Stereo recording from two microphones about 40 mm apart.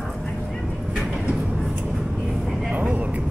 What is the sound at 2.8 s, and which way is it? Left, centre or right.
Vehicle, right.